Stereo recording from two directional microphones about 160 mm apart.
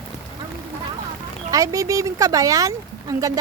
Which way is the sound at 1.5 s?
20° right (ahead or behind).